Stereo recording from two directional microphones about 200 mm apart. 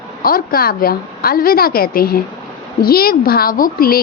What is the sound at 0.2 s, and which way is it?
A woman's voice, 45° left (ahead or behind).